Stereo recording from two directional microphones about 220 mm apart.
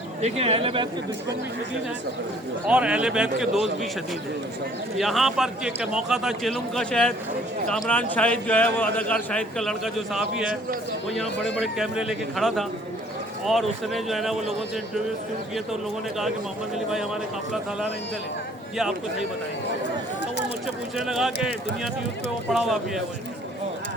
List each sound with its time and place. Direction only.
0.2 s speech: 30° right (ahead or behind)
2.6 s a man's voice: 5° right (ahead or behind)
4.9 s a man's voice: centre (ahead or behind)
10.4 s a man's voice: 40° right (ahead or behind)
11.4 s a man's voice: centre (ahead or behind)
15.5 s a man's voice: centre (ahead or behind)
20.9 s a man's voice: centre (ahead or behind)
22.5 s a man's voice: centre (ahead or behind)